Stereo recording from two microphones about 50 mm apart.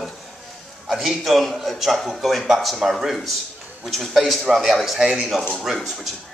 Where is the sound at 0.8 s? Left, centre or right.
Centre.